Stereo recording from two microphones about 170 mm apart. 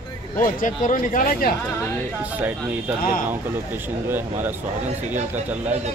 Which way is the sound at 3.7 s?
10° right (ahead or behind).